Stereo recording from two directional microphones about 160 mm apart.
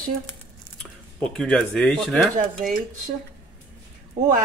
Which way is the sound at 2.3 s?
55° right (ahead or behind).